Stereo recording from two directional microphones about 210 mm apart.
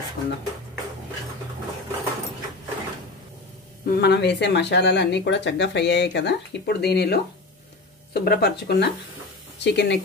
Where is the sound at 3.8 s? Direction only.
50° left (ahead or behind).